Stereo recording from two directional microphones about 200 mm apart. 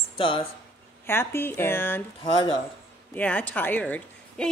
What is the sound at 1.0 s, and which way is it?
A woman's voice, 10° left (ahead or behind).